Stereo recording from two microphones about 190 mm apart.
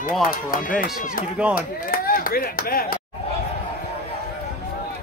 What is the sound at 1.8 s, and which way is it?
Speech, 50° left (ahead or behind).